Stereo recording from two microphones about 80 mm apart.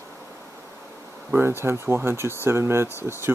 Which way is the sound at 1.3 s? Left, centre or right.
Right.